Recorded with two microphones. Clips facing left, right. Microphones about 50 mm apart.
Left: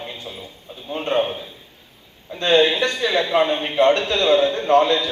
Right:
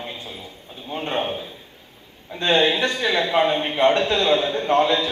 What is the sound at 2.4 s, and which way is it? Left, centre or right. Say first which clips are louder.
A man's voice: left 2 dB; right.